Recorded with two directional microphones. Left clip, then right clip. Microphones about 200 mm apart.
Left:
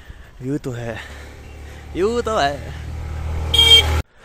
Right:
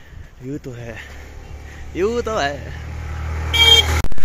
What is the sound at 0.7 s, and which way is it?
Speech, 30° left (ahead or behind).